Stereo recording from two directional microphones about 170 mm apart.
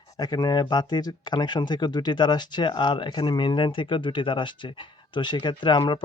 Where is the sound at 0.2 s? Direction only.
25° left (ahead or behind).